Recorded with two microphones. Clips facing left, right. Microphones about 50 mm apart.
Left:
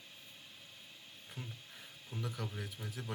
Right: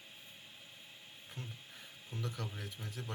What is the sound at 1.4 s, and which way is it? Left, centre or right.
Speech, centre.